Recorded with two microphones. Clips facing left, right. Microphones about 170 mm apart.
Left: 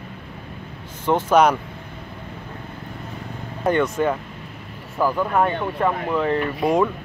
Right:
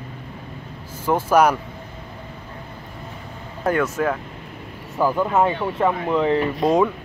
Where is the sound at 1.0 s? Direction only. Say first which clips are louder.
Even; 10° right (ahead or behind).